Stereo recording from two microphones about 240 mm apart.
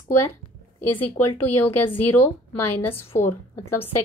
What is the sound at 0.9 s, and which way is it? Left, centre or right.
Speech, centre.